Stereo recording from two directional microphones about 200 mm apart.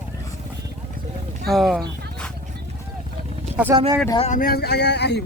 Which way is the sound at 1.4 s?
Centre (ahead or behind).